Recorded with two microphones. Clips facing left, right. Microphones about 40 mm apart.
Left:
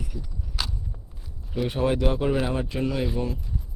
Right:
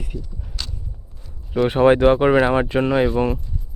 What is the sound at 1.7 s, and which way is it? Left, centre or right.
A man's voice, right.